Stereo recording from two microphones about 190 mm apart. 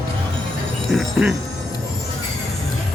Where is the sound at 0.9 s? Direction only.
5° right (ahead or behind).